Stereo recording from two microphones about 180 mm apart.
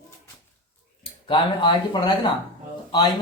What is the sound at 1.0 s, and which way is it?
A man's voice, 25° left (ahead or behind).